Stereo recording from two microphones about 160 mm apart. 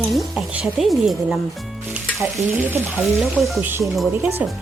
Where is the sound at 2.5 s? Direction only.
15° right (ahead or behind).